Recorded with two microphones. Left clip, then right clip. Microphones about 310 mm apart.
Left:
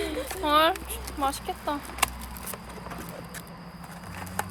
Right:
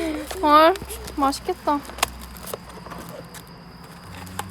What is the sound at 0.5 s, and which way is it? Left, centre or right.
Speech, right.